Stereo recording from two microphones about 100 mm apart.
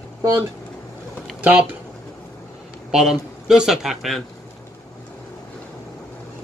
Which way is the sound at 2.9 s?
5° right (ahead or behind).